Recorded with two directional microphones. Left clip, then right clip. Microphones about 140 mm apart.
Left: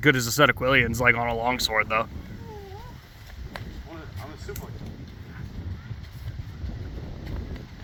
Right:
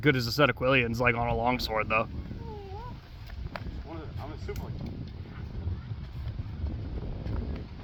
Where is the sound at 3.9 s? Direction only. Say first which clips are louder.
Even; 15° left (ahead or behind).